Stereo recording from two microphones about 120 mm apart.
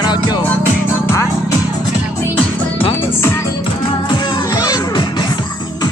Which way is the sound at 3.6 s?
40° left (ahead or behind).